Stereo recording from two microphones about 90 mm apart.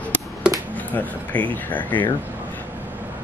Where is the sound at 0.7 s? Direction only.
15° left (ahead or behind).